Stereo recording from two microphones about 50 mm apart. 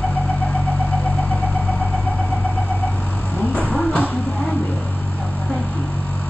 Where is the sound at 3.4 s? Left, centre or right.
Left.